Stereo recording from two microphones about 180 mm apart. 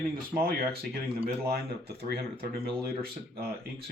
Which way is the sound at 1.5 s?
60° right (ahead or behind).